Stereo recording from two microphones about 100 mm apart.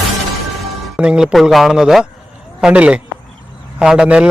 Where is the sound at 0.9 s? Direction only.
10° right (ahead or behind).